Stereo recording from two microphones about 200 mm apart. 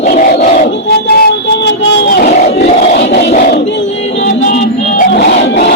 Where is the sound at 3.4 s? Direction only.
50° left (ahead or behind).